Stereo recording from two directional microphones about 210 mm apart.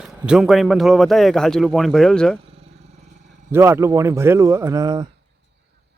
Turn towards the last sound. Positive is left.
turn(degrees=-15)  # may be behind; listen again after turning